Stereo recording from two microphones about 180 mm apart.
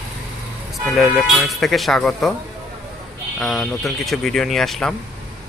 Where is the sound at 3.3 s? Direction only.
Centre (ahead or behind).